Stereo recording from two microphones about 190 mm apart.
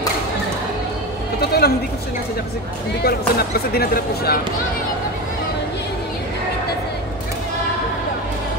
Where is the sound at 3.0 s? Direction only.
55° left (ahead or behind).